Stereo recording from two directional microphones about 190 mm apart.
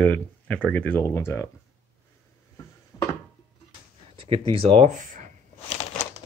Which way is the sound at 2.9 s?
20° left (ahead or behind).